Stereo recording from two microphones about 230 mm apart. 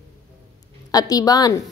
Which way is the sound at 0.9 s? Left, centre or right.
Centre.